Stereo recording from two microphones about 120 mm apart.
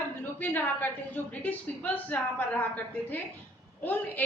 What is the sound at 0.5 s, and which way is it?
A woman's voice, 15° left (ahead or behind).